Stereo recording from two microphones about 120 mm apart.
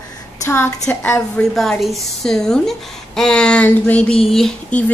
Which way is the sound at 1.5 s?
Centre (ahead or behind).